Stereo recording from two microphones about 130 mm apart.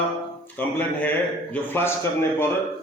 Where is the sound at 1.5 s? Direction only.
15° left (ahead or behind).